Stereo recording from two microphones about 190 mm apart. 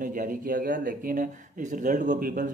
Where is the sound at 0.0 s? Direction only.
45° right (ahead or behind).